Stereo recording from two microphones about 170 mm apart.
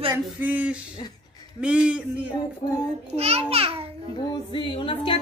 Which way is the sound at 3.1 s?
35° right (ahead or behind).